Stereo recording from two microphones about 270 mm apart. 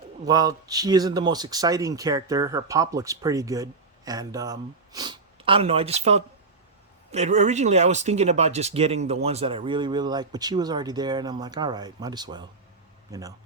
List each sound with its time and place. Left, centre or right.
0.3 s a man's voice: centre